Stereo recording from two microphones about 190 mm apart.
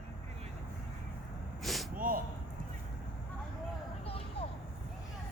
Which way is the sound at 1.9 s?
45° right (ahead or behind).